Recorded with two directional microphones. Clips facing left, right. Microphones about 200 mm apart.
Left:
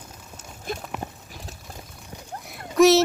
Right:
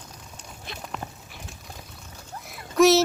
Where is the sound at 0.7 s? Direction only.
50° left (ahead or behind).